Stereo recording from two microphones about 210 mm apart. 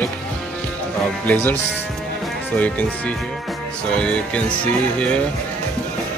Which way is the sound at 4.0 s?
5° left (ahead or behind).